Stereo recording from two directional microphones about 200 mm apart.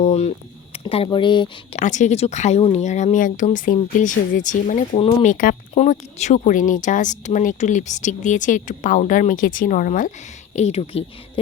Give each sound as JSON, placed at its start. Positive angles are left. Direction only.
{"t": 0.0, "sound": "speech", "side_deg": 30}
{"t": 1.8, "sound": "speech", "side_deg": 35}